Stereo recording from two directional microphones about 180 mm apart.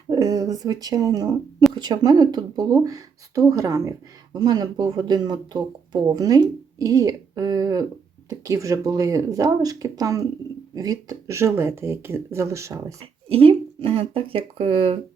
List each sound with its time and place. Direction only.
0.1 s speech: 20° right (ahead or behind)
13.2 s speech: 30° right (ahead or behind)